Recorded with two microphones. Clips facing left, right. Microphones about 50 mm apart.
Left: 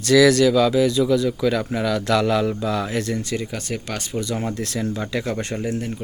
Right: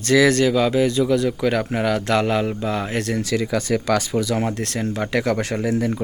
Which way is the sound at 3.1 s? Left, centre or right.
Right.